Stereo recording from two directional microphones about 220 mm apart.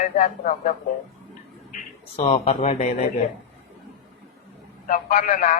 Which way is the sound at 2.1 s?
30° left (ahead or behind).